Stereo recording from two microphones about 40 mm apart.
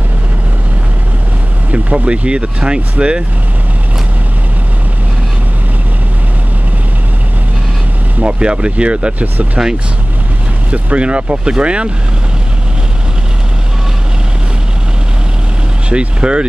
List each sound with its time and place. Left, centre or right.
1.7 s speech: right
2.2 s speech: right
8.2 s speech: right
10.7 s speech: right
15.9 s speech: right